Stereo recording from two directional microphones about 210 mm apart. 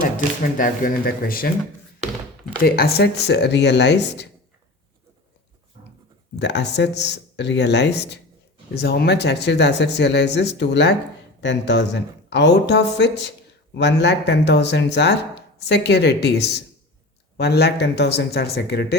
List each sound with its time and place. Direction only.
0.5 s speech: 40° left (ahead or behind)
2.6 s speech: 45° left (ahead or behind)
6.3 s speech: 55° left (ahead or behind)